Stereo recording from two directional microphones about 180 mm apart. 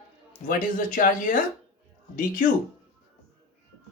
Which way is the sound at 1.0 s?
50° left (ahead or behind).